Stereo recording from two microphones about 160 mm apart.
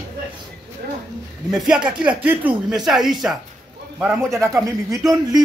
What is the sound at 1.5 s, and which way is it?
Speech, 5° right (ahead or behind).